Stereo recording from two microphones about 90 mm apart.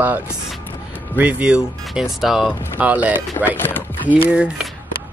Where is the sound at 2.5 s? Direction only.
15° right (ahead or behind).